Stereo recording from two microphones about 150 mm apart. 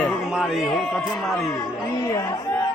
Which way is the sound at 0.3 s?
Centre (ahead or behind).